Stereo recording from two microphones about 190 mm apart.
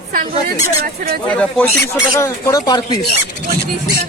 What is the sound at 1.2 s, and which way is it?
Speech, 5° left (ahead or behind).